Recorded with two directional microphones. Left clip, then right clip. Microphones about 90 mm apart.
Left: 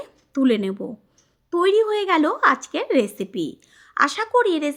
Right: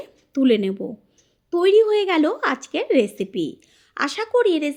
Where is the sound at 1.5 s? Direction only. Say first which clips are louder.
Right 2 dB; 25° right (ahead or behind).